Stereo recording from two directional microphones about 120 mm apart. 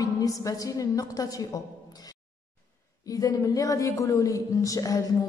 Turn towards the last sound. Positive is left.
turn(degrees=30)  # may be behind; listen again after turning